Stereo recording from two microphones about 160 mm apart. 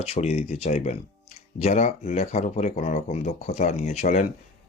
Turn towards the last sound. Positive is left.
turn(degrees=50)  # may be behind; listen again after turning